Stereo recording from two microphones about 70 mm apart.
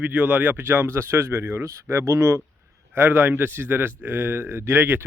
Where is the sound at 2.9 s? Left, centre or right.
Right.